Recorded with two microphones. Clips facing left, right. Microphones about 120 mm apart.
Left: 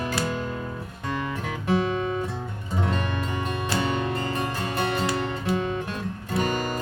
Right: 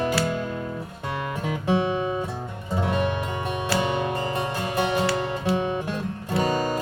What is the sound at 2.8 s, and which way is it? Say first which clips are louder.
Music: right 3 dB; 15° right (ahead or behind).